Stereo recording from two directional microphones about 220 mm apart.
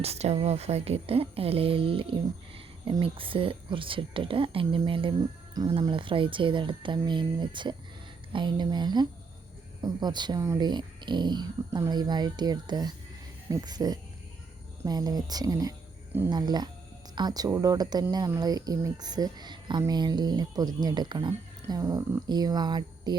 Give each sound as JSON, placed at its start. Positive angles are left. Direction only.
{"t": 0.0, "sound": "speech", "side_deg": -30}